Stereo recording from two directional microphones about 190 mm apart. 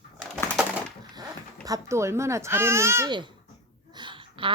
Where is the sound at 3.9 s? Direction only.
25° right (ahead or behind).